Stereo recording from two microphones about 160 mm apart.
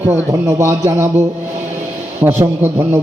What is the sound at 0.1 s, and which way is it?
Speech, 15° right (ahead or behind).